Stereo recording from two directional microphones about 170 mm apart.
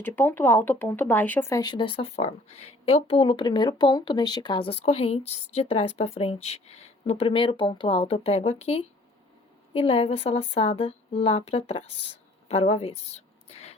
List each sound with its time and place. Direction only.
0.0 s speech: 10° left (ahead or behind); by 13.7 s 40° left (ahead or behind)